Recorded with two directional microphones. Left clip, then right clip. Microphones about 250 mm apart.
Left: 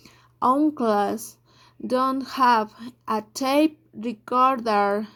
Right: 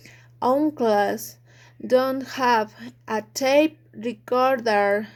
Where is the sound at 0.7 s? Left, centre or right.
Centre.